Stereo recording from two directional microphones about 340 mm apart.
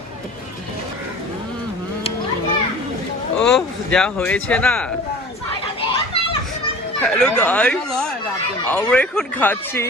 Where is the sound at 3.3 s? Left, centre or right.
Centre.